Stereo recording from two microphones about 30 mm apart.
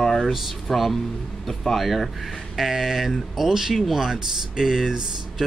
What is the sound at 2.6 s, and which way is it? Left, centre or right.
Speech, centre.